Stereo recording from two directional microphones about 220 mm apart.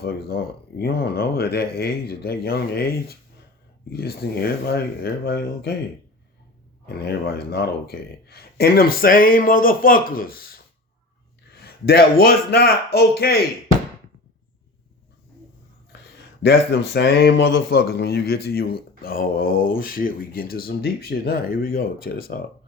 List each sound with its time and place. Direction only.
0.0 s speech: 45° left (ahead or behind)
6.8 s speech: 45° left (ahead or behind)
15.9 s a sound: 50° left (ahead or behind)
16.4 s speech: 45° left (ahead or behind)